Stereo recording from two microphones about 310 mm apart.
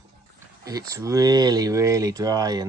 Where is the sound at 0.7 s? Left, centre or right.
Centre.